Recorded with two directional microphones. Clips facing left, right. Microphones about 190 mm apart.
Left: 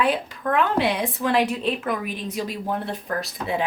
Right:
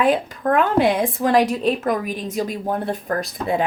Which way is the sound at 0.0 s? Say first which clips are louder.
Right 4 dB; 45° right (ahead or behind).